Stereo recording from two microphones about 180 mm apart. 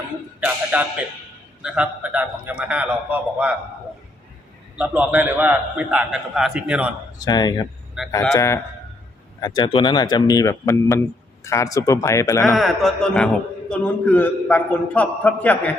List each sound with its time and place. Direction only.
0.3 s a man's voice: 10° right (ahead or behind)
4.8 s a man's voice: 10° right (ahead or behind)
7.2 s speech: 20° left (ahead or behind)
8.0 s speech: centre (ahead or behind)
8.3 s a man's voice: 15° left (ahead or behind)
12.5 s a man's voice: centre (ahead or behind)